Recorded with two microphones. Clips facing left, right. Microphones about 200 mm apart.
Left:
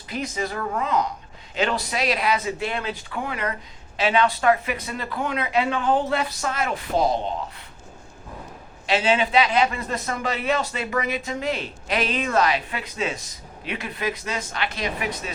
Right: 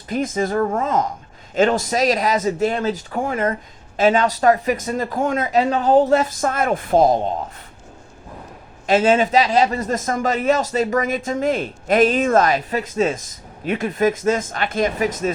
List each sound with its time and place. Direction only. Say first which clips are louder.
0.1 s a man's voice: right 8 dB; 50° right (ahead or behind)
8.9 s a man's voice: right 6 dB; 50° right (ahead or behind)